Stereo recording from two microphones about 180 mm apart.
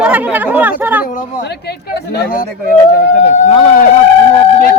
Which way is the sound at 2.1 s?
55° left (ahead or behind).